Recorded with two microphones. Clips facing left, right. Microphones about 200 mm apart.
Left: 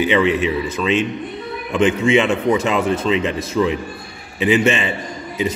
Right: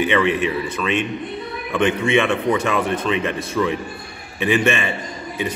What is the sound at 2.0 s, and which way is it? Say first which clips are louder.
A man's voice: left 3 dB; 20° left (ahead or behind).